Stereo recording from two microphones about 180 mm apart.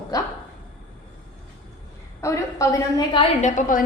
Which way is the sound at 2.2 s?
15° left (ahead or behind).